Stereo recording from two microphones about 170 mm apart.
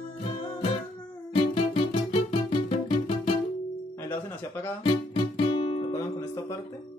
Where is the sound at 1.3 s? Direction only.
30° left (ahead or behind).